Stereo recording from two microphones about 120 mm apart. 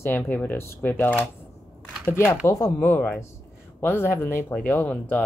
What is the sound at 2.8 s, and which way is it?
Speech, 15° left (ahead or behind).